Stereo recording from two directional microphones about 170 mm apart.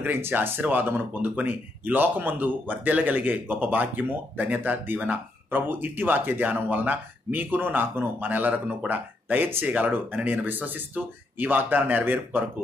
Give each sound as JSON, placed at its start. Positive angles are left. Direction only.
{"t": 0.0, "sound": "speech", "side_deg": -10}